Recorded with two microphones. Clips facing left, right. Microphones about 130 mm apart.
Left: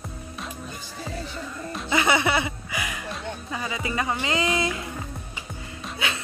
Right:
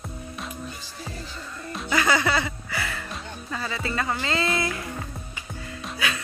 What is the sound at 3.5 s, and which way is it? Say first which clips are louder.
Speech: even; 15° left (ahead or behind).